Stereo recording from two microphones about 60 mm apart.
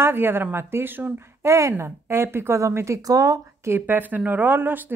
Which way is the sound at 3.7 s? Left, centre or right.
Right.